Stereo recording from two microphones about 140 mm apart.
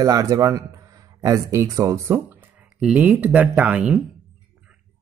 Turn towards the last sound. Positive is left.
turn(degrees=-10)  # may be behind; listen again after turning